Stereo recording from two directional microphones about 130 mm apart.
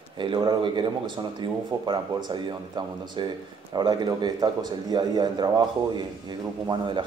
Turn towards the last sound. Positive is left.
turn(degrees=-35)  # may be behind; listen again after turning